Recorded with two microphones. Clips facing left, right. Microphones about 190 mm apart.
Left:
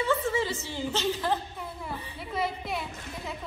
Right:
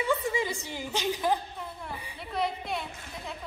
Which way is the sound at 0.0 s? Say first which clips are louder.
Left 1 dB; 15° right (ahead or behind).